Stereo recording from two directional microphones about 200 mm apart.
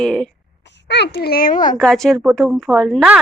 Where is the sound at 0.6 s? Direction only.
60° left (ahead or behind); by 1.8 s 40° left (ahead or behind).